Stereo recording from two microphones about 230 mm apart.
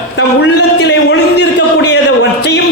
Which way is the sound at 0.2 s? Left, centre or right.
Left.